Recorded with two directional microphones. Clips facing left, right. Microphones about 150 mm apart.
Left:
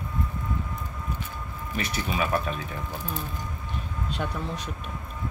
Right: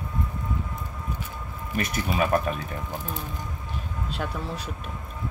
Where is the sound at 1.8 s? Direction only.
45° right (ahead or behind).